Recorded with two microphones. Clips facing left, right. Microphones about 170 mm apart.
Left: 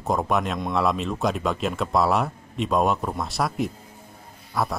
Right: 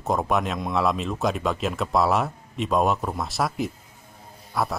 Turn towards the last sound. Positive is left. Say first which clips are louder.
# even
turn(degrees=0)  # may be behind; listen again after turning